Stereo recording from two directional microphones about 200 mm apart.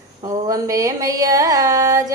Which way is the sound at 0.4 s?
15° right (ahead or behind).